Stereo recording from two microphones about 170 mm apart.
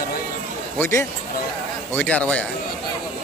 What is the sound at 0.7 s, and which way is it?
A man's voice, 15° left (ahead or behind).